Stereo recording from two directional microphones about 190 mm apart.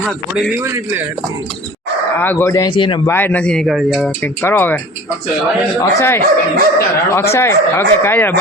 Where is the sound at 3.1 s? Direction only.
10° left (ahead or behind).